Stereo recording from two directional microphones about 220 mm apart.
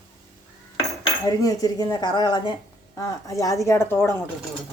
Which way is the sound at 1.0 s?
15° left (ahead or behind).